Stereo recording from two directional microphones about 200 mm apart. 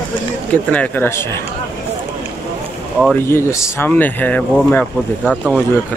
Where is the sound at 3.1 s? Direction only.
10° left (ahead or behind).